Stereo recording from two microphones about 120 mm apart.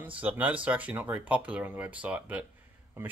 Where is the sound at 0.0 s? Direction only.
15° right (ahead or behind).